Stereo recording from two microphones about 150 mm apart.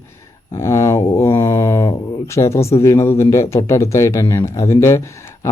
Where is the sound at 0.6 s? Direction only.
20° left (ahead or behind).